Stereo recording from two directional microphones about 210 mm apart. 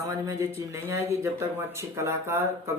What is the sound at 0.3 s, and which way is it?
Speech, 15° right (ahead or behind).